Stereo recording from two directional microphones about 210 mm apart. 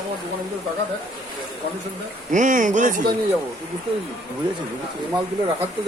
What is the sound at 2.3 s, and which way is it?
Speech, 40° right (ahead or behind).